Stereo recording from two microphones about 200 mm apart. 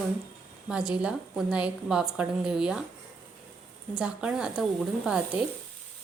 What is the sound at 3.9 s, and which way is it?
Speech, 5° right (ahead or behind).